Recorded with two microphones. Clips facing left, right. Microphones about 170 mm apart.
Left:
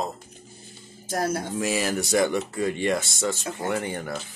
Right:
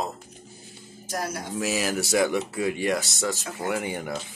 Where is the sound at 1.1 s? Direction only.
55° left (ahead or behind).